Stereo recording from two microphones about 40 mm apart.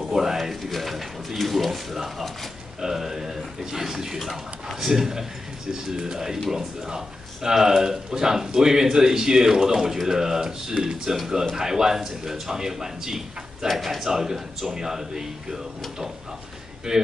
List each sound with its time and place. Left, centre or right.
0.0 s a sound: centre
2.8 s speech: centre
7.4 s speech: centre